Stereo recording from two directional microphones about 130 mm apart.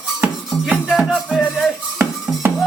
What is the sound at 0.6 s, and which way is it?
Music, centre (ahead or behind).